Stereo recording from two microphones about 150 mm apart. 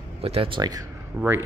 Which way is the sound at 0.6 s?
25° right (ahead or behind).